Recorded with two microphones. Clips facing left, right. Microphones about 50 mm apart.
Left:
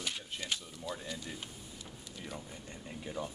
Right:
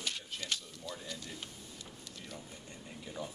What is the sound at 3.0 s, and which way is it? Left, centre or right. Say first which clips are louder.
Speech: left 3 dB; centre.